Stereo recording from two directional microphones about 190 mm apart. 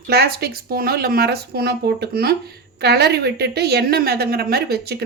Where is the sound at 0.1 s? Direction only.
55° right (ahead or behind).